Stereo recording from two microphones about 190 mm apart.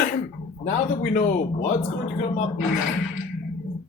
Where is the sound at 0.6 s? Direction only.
40° left (ahead or behind).